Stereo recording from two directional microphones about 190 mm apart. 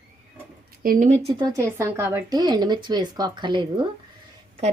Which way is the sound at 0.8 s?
40° right (ahead or behind).